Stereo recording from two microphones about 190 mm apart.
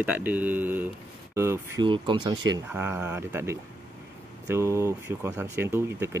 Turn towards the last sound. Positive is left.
turn(degrees=-15)  # may be behind; listen again after turning